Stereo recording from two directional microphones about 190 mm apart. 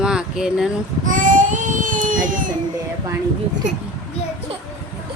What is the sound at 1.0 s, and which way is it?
Baby cry, 45° right (ahead or behind).